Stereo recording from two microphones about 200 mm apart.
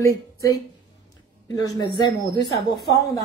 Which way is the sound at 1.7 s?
20° left (ahead or behind).